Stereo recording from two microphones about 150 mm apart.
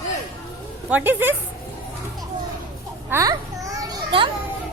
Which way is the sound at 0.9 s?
15° right (ahead or behind).